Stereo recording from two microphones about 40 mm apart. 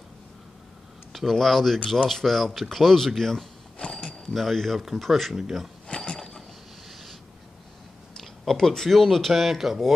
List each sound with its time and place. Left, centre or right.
1.1 s speech: centre
3.8 s a sound: left
4.3 s speech: centre
5.9 s mechanisms: centre
6.9 s a sound: centre
8.2 s speech: centre